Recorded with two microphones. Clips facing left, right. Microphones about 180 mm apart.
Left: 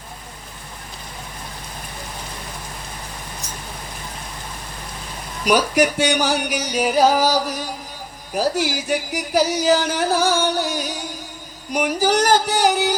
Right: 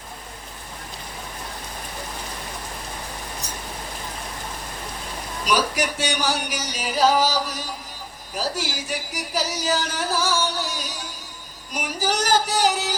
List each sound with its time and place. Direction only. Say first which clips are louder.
5.5 s music: left 6 dB; 60° left (ahead or behind)